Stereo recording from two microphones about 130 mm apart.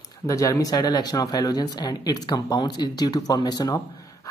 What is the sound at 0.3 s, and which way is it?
Speech, 25° left (ahead or behind).